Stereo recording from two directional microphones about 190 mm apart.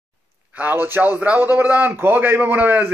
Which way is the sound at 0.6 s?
10° right (ahead or behind).